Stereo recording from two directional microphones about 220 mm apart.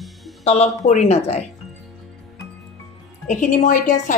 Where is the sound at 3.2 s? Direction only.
35° left (ahead or behind).